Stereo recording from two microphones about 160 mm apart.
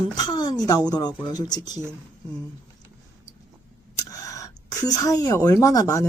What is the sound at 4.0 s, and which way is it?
Speech, 20° left (ahead or behind).